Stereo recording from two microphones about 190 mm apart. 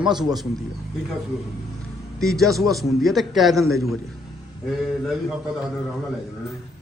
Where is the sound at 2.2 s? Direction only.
Centre (ahead or behind).